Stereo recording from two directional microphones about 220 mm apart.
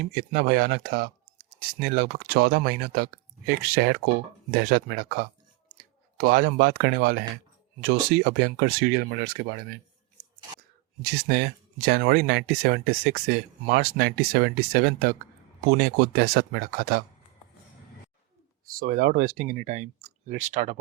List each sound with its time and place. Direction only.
0.0 s speech: 45° right (ahead or behind)
11.0 s speech: 45° right (ahead or behind)
18.6 s speech: 40° right (ahead or behind)